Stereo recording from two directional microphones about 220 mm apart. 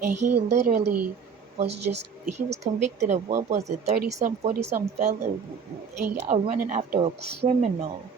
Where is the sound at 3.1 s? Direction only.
30° right (ahead or behind).